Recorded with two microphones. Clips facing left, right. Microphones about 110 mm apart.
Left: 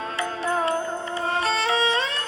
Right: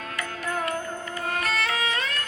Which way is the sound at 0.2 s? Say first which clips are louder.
Left 5 dB; 25° left (ahead or behind).